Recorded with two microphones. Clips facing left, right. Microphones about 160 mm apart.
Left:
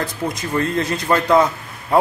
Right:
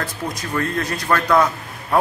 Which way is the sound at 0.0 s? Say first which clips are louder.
Left 3 dB; 20° left (ahead or behind).